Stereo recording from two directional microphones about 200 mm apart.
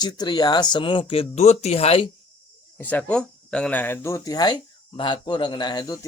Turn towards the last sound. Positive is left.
turn(degrees=20)  # may be behind; listen again after turning